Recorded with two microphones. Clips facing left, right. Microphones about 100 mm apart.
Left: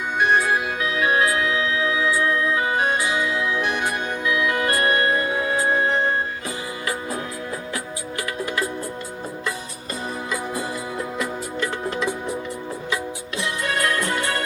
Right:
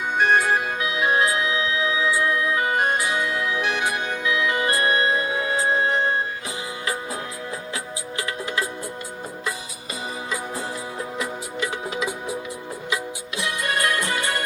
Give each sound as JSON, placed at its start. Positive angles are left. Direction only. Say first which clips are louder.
{"t": 0.2, "sound": "music", "louder": "even", "side_deg": -50}
{"t": 0.9, "sound": "music", "louder": "left 1 dB", "side_deg": -20}
{"t": 2.8, "sound": "music", "louder": "left 1 dB", "side_deg": -50}
{"t": 4.3, "sound": "music", "louder": "left 1 dB", "side_deg": -25}
{"t": 11.6, "sound": "music", "louder": "left 2 dB", "side_deg": -10}